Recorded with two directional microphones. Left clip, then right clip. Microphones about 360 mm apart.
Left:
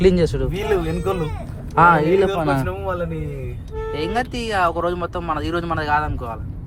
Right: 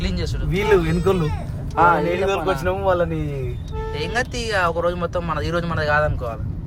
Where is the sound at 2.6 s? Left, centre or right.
Right.